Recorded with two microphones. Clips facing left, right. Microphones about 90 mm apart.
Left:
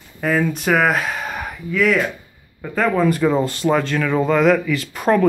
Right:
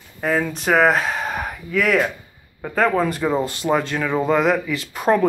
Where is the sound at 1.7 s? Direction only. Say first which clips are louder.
Left 1 dB; 45° right (ahead or behind).